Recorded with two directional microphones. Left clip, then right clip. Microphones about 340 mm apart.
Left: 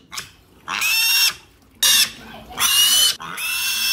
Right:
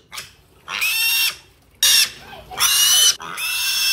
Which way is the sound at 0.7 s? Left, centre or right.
Left.